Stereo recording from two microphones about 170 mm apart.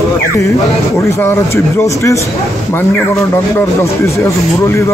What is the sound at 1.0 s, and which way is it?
Speech, 20° left (ahead or behind).